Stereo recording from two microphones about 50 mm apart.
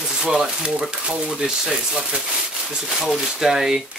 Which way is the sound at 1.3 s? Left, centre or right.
Centre.